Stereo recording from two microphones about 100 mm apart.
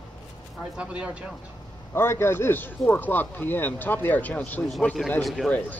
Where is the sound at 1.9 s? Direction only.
25° left (ahead or behind).